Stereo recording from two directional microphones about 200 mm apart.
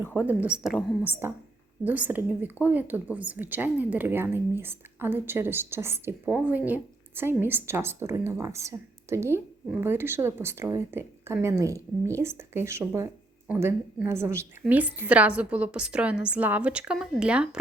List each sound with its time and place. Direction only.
0.0 s a woman's voice: 10° right (ahead or behind)